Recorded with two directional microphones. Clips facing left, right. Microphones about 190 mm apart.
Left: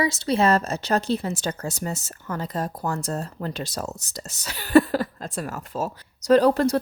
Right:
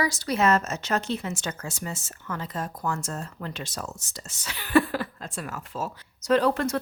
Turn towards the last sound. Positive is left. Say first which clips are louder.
# left 5 dB
turn(degrees=35)  # may be behind; listen again after turning